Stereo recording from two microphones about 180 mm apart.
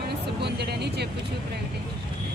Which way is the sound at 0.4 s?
65° right (ahead or behind).